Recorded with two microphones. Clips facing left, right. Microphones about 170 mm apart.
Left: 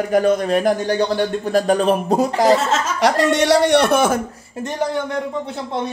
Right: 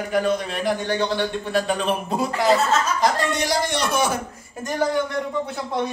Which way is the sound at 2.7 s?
85° left.